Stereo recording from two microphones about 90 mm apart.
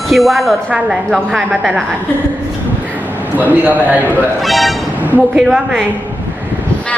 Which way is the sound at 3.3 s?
20° right (ahead or behind).